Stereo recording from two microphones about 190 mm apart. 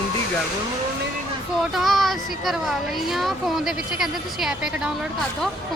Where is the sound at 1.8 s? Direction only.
Centre (ahead or behind).